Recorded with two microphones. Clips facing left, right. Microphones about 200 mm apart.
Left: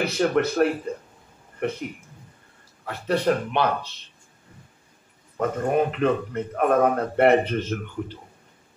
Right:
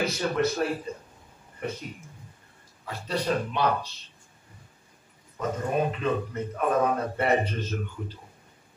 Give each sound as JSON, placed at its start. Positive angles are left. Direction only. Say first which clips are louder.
{"t": 0.0, "sound": "speech", "louder": "left 4 dB", "side_deg": 60}
{"t": 5.4, "sound": "speech", "louder": "left 5 dB", "side_deg": 60}